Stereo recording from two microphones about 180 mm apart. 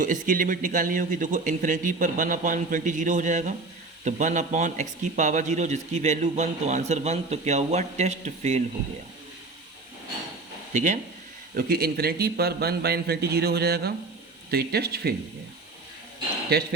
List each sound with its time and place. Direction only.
0.0 s a man's voice: 45° right (ahead or behind)
10.8 s a man's voice: 45° right (ahead or behind)
11.5 s a man's voice: 55° right (ahead or behind)